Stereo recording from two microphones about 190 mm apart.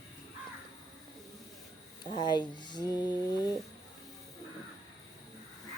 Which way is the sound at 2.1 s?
25° left (ahead or behind).